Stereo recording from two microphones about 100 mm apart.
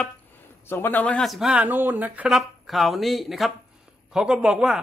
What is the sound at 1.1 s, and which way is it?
Speech, centre (ahead or behind).